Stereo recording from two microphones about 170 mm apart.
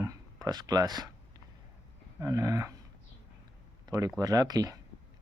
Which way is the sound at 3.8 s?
20° right (ahead or behind).